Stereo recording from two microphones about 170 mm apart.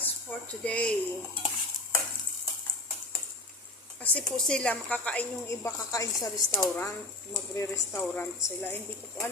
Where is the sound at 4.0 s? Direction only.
10° left (ahead or behind).